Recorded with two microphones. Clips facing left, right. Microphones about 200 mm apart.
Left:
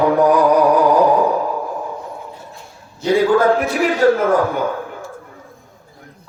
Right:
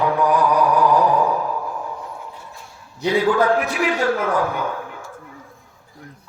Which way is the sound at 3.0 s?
40° left (ahead or behind).